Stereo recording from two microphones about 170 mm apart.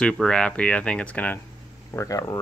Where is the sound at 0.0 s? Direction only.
5° left (ahead or behind).